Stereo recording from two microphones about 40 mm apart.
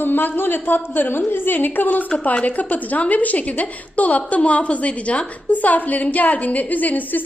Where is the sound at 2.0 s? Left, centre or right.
Left.